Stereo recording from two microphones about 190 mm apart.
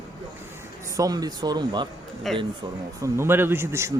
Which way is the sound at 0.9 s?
20° right (ahead or behind).